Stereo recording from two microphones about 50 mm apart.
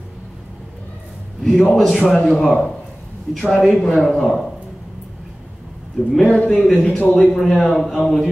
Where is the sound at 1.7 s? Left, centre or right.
Centre.